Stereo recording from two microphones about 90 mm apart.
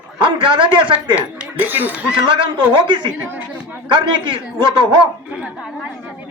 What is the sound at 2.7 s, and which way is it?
A man's voice, 65° right (ahead or behind).